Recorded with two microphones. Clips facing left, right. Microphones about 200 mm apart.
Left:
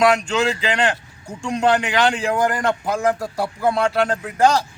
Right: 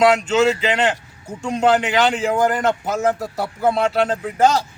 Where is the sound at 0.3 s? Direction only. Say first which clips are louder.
Right 4 dB; 5° right (ahead or behind).